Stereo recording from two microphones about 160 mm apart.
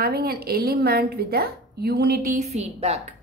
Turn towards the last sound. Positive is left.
turn(degrees=-40)  # may be behind; listen again after turning